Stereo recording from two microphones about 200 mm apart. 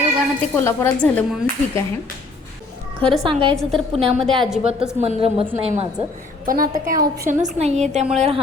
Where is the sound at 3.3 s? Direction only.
25° right (ahead or behind).